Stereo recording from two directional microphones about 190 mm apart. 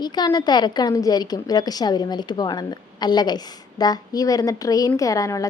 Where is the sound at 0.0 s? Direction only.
20° left (ahead or behind).